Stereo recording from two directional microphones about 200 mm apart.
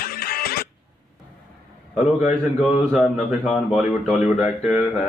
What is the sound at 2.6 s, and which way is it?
Speech, centre (ahead or behind).